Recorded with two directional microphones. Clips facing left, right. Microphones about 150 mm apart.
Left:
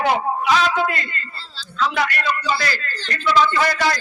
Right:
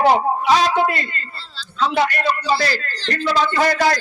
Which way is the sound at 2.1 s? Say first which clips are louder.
Right 3 dB; 35° right (ahead or behind).